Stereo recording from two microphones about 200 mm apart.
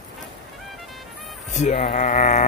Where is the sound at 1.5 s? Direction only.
35° left (ahead or behind).